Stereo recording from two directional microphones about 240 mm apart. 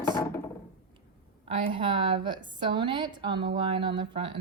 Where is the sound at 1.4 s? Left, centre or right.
Right.